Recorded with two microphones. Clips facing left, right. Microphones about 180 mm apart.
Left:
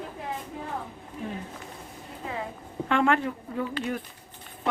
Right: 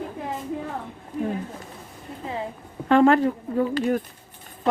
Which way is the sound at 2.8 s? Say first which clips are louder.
Right 7 dB; 35° right (ahead or behind).